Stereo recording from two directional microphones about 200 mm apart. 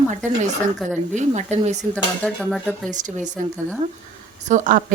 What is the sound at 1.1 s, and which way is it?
Speech, 35° right (ahead or behind).